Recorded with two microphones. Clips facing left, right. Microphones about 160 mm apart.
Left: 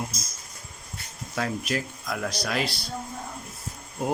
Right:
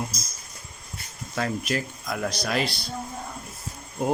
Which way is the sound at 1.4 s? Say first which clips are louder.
Right 1 dB; centre (ahead or behind).